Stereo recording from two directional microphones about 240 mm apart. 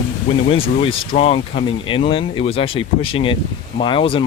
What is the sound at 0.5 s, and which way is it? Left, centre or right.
Speech, left.